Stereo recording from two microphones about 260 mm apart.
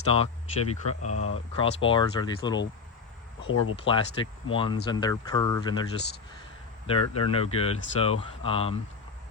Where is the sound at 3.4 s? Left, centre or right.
Left.